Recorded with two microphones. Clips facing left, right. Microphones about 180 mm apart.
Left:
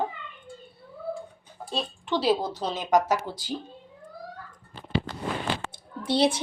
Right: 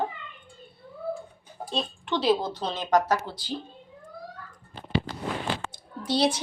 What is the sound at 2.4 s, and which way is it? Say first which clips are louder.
Speech: left 1 dB; 40° left (ahead or behind).